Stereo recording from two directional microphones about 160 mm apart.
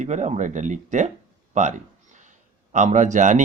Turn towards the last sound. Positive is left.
turn(degrees=-50)  # may be behind; listen again after turning